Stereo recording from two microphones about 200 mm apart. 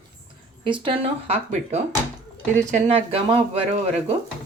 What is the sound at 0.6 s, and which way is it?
A woman's voice, 25° right (ahead or behind).